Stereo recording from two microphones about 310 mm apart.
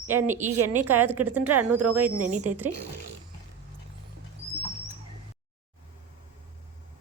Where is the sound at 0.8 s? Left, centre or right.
Right.